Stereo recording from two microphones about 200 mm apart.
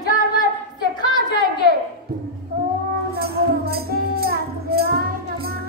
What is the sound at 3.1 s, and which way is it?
Music, 50° right (ahead or behind).